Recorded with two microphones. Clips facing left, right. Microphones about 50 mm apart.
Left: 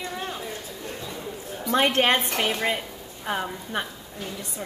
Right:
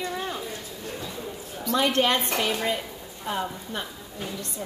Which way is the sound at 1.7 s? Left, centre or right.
Left.